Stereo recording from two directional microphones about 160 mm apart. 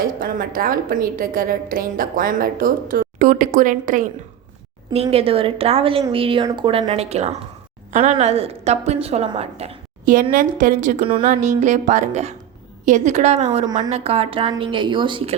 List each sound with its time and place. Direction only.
0.0 s a woman's voice: 60° right (ahead or behind)
5.1 s a woman's voice: 35° right (ahead or behind)
10.3 s speech: 55° right (ahead or behind)
11.0 s a woman's voice: 35° right (ahead or behind)
11.3 s a woman's voice: 50° right (ahead or behind); by 15.4 s 30° right (ahead or behind)